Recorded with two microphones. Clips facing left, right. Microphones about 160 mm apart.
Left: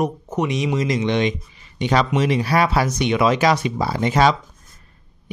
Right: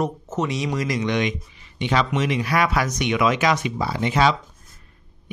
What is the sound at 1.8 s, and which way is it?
Speech, 40° left (ahead or behind).